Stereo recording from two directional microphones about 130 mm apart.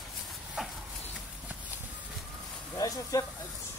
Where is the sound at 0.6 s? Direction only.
5° right (ahead or behind).